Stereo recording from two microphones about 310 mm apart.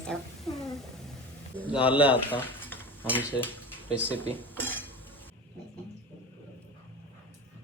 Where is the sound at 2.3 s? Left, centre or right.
Centre.